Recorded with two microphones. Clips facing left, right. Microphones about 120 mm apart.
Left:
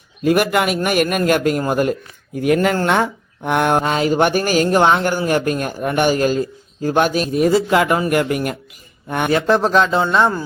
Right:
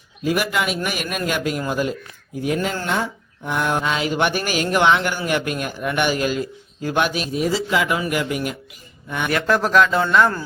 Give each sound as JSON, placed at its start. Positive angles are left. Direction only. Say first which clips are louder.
{"t": 0.3, "sound": "a man's voice", "louder": "left 6 dB", "side_deg": 55}
{"t": 9.3, "sound": "a man's voice", "louder": "left 3 dB", "side_deg": 25}